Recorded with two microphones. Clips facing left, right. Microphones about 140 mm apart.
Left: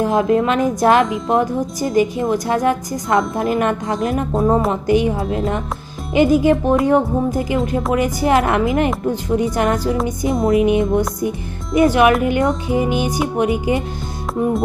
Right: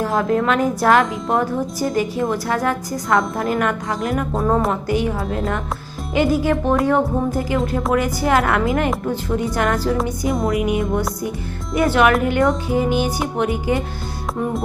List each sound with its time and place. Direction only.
0.0 s speech: 20° left (ahead or behind)
6.1 s music: 20° left (ahead or behind)
7.9 s speech: 20° left (ahead or behind)
11.7 s music: 20° left (ahead or behind)